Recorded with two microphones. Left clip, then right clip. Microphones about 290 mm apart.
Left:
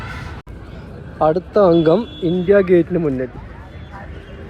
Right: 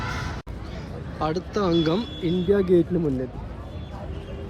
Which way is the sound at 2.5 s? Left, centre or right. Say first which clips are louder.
Left 7 dB; centre.